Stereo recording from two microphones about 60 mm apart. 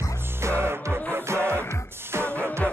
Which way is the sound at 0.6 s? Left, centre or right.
Right.